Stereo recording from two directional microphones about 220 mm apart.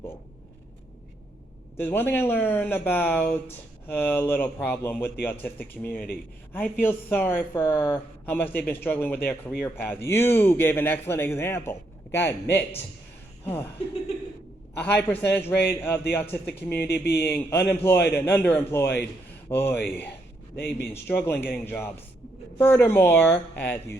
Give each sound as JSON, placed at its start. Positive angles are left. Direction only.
{"t": 1.8, "sound": "a woman's voice", "side_deg": 10}
{"t": 14.8, "sound": "speech", "side_deg": 10}
{"t": 16.9, "sound": "speech", "side_deg": 45}
{"t": 17.2, "sound": "speech", "side_deg": 10}